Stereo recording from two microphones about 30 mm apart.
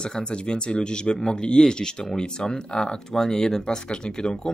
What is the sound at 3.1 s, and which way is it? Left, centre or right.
Speech, centre.